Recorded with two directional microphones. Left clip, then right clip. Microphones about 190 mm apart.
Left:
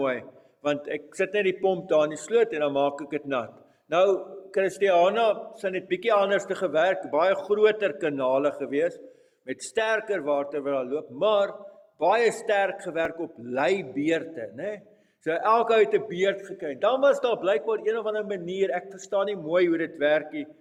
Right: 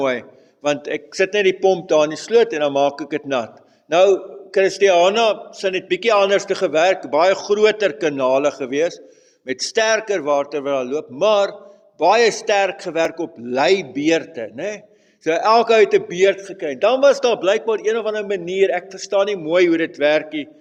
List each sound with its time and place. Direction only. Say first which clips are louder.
0.0 s a man's voice: right 7 dB; 30° right (ahead or behind)